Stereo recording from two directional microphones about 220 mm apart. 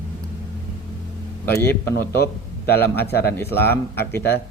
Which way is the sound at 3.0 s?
10° left (ahead or behind).